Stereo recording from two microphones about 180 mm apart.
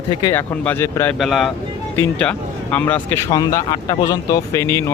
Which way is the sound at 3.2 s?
20° left (ahead or behind).